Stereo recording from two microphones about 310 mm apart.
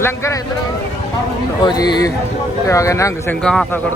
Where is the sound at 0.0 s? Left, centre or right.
Centre.